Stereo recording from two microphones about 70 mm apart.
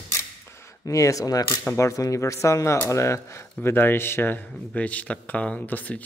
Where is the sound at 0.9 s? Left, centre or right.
Left.